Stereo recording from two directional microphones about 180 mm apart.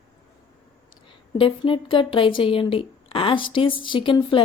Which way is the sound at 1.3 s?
30° left (ahead or behind).